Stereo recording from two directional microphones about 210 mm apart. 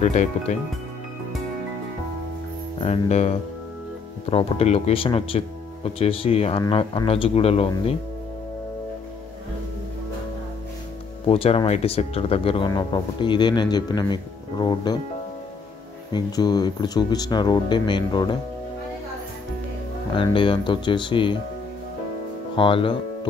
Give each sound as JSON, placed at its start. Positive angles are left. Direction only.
{"t": 0.0, "sound": "speech", "side_deg": 35}
{"t": 2.8, "sound": "speech", "side_deg": 30}
{"t": 11.2, "sound": "speech", "side_deg": 25}
{"t": 16.1, "sound": "speech", "side_deg": 20}
{"t": 20.2, "sound": "speech", "side_deg": 25}
{"t": 22.6, "sound": "speech", "side_deg": 25}